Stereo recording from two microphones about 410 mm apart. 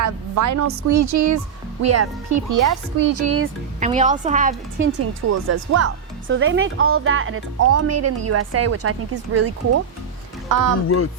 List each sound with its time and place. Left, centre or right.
0.0 s speech: right
3.8 s a woman's voice: centre
5.3 s speech: right
10.5 s speech: right
10.8 s a sound: left